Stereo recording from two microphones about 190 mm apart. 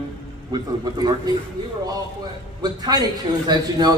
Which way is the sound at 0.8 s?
20° right (ahead or behind).